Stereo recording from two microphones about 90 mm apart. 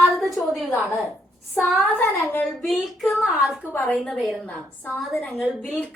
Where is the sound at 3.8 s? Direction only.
10° left (ahead or behind).